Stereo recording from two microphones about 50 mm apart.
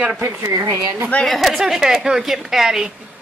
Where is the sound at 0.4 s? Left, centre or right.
Right.